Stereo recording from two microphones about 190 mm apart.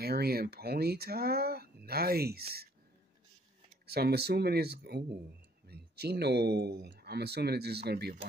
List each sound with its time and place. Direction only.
0.0 s speech: 55° right (ahead or behind)
3.9 s speech: 55° right (ahead or behind)